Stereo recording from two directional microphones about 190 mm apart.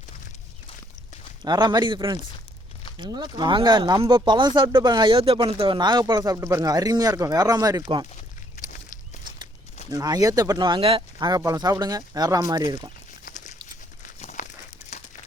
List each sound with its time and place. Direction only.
1.4 s speech: 20° right (ahead or behind)
9.9 s speech: 20° right (ahead or behind)
13.2 s a sound: 40° left (ahead or behind)